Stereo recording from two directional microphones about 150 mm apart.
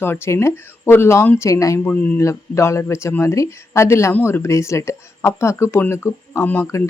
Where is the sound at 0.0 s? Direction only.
15° left (ahead or behind).